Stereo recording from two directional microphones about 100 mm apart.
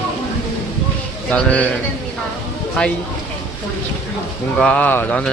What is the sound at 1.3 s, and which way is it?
Speech, 15° left (ahead or behind).